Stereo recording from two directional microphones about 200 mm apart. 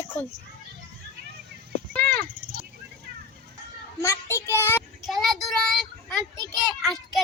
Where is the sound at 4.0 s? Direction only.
15° left (ahead or behind).